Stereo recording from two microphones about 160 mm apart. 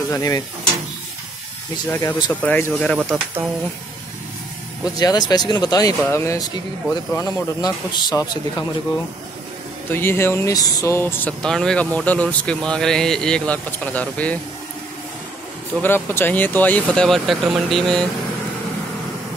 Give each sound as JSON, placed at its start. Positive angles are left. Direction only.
{"t": 0.1, "sound": "speech", "side_deg": 20}
{"t": 1.9, "sound": "speech", "side_deg": 15}
{"t": 3.0, "sound": "speech", "side_deg": -10}
{"t": 4.9, "sound": "speech", "side_deg": 25}
{"t": 9.8, "sound": "speech", "side_deg": 15}
{"t": 11.4, "sound": "speech", "side_deg": 5}
{"t": 15.8, "sound": "speech", "side_deg": 15}